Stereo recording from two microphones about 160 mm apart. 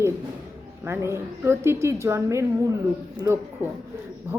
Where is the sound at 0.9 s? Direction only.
15° right (ahead or behind).